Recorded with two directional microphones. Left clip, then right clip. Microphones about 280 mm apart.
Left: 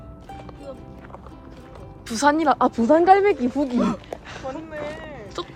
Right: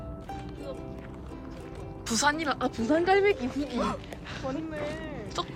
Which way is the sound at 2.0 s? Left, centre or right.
Centre.